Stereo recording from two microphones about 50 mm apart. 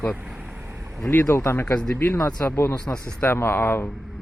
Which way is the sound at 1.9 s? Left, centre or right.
Left.